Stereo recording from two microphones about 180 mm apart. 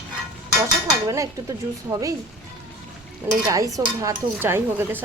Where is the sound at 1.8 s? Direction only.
20° right (ahead or behind).